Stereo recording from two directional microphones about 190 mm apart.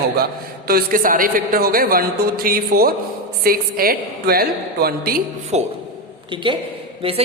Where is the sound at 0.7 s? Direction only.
50° right (ahead or behind).